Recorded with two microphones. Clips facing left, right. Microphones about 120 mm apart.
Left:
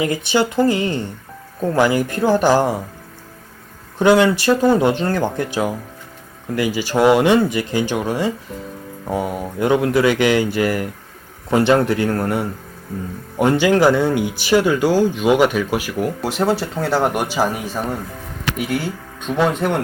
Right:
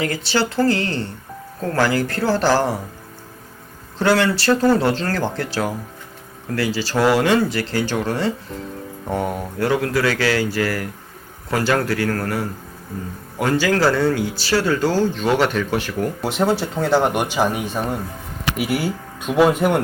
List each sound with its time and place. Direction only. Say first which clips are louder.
0.0 s speech: left 3 dB; 15° left (ahead or behind)
3.9 s speech: left 4 dB; 15° left (ahead or behind)
9.6 s speech: left 4 dB; 20° left (ahead or behind); by 19.8 s 5° right (ahead or behind)